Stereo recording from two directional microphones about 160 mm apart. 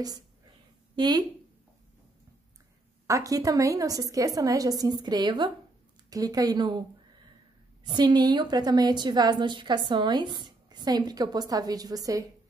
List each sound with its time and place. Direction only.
0.9 s a woman's voice: 25° right (ahead or behind)
3.1 s a woman's voice: 20° right (ahead or behind)
7.8 s a woman's voice: 30° right (ahead or behind)